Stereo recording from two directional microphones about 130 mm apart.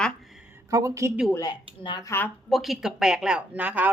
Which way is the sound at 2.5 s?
Centre (ahead or behind).